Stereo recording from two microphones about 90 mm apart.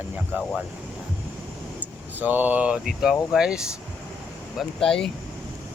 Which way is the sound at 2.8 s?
5° right (ahead or behind).